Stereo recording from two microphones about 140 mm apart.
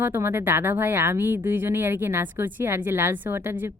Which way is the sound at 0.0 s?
15° right (ahead or behind).